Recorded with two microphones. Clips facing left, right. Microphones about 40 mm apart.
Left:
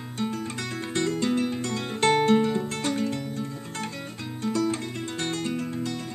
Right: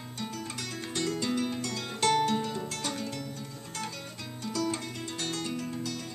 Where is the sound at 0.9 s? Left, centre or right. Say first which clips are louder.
Left 5 dB; left.